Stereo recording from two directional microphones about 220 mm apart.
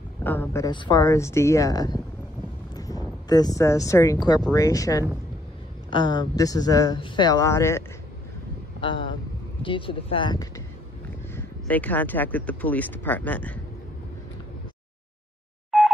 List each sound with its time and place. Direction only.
0.2 s speech: 10° left (ahead or behind)
2.7 s a sound: 15° left (ahead or behind)
4.6 s speech: 15° left (ahead or behind)
9.6 s speech: 25° left (ahead or behind)
11.3 s speech: 5° left (ahead or behind)
15.7 s telephone dialing: centre (ahead or behind)